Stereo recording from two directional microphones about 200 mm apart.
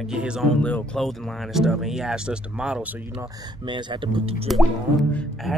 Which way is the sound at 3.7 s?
25° right (ahead or behind).